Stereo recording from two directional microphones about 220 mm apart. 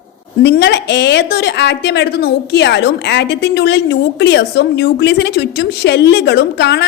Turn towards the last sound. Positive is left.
turn(degrees=50)  # may be behind; listen again after turning